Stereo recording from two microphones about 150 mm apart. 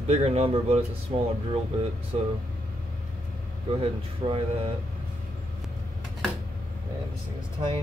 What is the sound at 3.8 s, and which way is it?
Speech, 40° right (ahead or behind).